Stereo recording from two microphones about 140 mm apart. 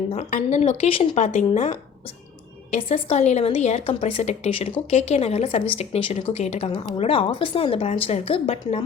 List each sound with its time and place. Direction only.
0.1 s a woman's voice: 55° left (ahead or behind)
1.1 s speech: 60° left (ahead or behind)
2.9 s a woman's voice: 50° left (ahead or behind)